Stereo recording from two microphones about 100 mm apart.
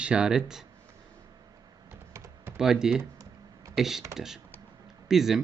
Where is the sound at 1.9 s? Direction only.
25° right (ahead or behind).